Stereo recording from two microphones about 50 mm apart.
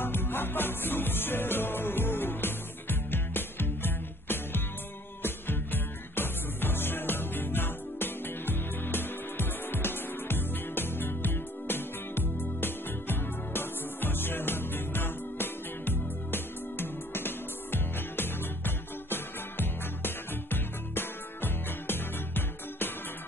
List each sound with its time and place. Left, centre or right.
0.0 s music: left